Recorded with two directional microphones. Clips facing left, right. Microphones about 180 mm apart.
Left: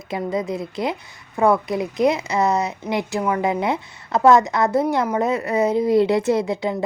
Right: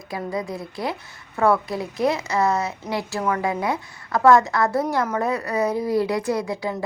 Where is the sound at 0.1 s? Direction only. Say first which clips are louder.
Left 4 dB; 20° left (ahead or behind).